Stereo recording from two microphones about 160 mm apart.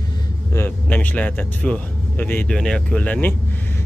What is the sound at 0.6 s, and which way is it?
Speech, 10° left (ahead or behind).